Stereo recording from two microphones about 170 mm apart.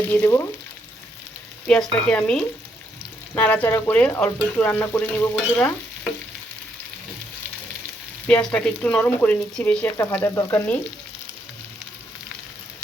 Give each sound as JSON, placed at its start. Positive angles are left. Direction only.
{"t": 0.1, "sound": "speech", "side_deg": 15}
{"t": 1.6, "sound": "speech", "side_deg": 5}
{"t": 8.3, "sound": "speech", "side_deg": 5}